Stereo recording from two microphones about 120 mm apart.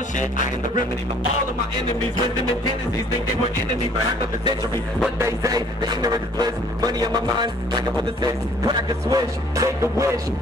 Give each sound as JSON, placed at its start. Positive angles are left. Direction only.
{"t": 5.2, "sound": "a man's voice", "side_deg": -25}